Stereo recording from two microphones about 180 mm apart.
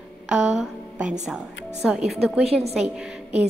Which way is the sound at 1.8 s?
5° right (ahead or behind).